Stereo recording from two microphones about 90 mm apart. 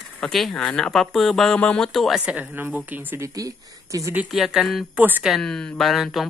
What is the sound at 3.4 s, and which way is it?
Speech, 40° right (ahead or behind).